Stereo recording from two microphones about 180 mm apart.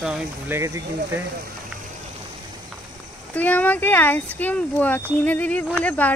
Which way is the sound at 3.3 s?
10° left (ahead or behind).